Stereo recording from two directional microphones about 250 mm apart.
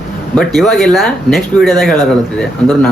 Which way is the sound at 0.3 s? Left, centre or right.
Centre.